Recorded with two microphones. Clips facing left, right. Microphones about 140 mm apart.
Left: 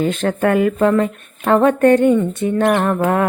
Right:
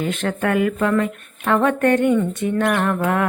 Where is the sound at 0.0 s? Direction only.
35° left (ahead or behind).